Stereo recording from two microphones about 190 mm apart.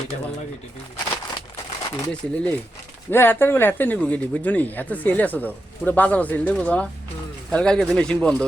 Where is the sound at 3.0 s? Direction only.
10° left (ahead or behind).